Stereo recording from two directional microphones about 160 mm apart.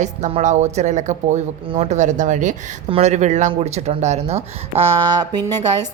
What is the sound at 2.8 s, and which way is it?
Speech, 40° right (ahead or behind).